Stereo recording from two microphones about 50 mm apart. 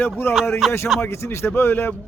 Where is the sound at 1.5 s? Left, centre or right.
Left.